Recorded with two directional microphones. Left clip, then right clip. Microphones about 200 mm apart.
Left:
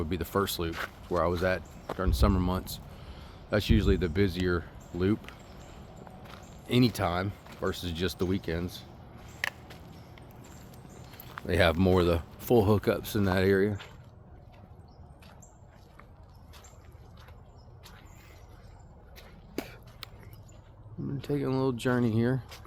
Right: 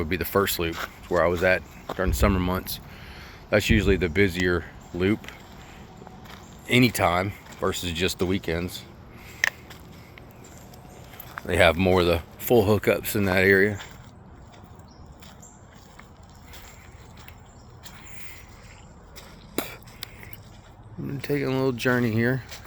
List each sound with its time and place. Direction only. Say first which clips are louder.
0.0 s speech: right 6 dB; 5° left (ahead or behind)
0.7 s speech: right 4 dB; 55° right (ahead or behind)
1.1 s speech: right 7 dB; 10° left (ahead or behind)
6.7 s speech: right 7 dB; 5° left (ahead or behind)
8.2 s speech: right 5 dB; 10° left (ahead or behind)
11.4 s speech: right 6 dB; 15° left (ahead or behind)
19.5 s a sound: right 7 dB; 5° right (ahead or behind)
20.0 s a sound: right 6 dB; 45° right (ahead or behind)
21.2 s speech: right 5 dB; 5° left (ahead or behind)